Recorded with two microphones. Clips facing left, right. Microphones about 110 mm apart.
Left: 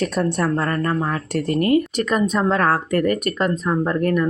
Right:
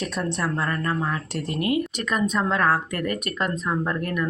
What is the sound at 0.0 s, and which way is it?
Speech, 45° left (ahead or behind).